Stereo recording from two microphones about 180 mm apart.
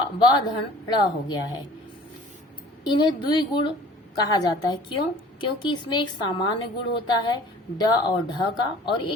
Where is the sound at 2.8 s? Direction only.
25° left (ahead or behind).